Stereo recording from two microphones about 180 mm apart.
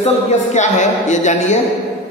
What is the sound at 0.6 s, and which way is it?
Mantra, 40° left (ahead or behind).